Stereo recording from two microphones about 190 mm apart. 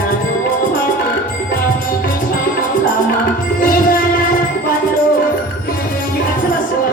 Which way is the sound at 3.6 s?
50° left (ahead or behind).